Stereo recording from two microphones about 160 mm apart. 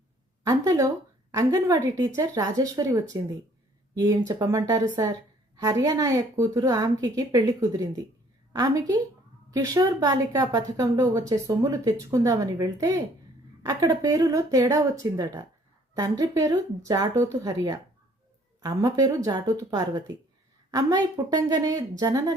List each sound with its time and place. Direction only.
0.4 s speech: 20° right (ahead or behind)